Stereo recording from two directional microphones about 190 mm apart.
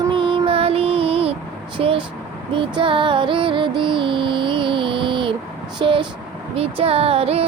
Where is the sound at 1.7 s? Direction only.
25° right (ahead or behind).